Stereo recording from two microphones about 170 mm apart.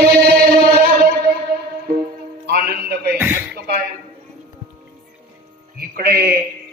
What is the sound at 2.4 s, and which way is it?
Music, 65° right (ahead or behind).